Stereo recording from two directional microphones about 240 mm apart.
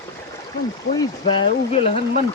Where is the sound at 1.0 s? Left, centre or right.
Left.